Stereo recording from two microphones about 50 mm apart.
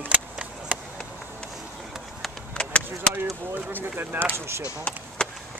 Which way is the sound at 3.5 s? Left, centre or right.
Right.